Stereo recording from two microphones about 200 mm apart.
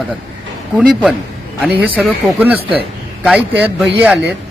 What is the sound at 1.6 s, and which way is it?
A man's voice, 5° right (ahead or behind).